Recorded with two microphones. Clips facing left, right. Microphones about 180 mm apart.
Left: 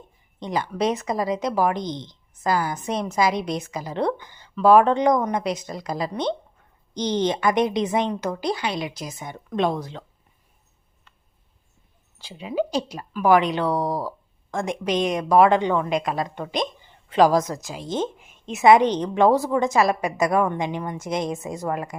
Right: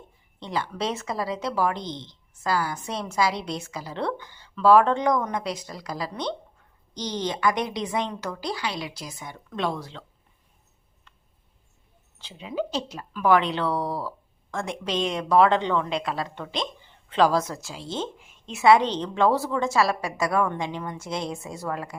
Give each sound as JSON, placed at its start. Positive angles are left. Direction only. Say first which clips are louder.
{"t": 0.3, "sound": "a woman's voice", "louder": "left 4 dB", "side_deg": 15}
{"t": 12.2, "sound": "speech", "louder": "left 4 dB", "side_deg": 10}